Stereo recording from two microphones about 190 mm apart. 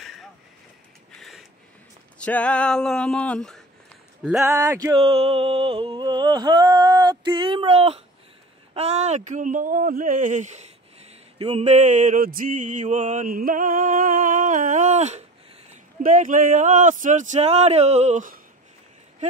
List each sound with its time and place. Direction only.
2.1 s speech: 5° left (ahead or behind)
4.6 s speech: 15° right (ahead or behind)
4.9 s a sound: 30° right (ahead or behind)
8.7 s speech: 35° right (ahead or behind)